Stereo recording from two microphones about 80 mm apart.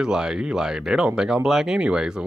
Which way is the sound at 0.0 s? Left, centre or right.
Centre.